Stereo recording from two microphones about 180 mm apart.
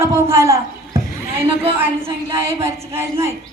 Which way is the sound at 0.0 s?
15° right (ahead or behind).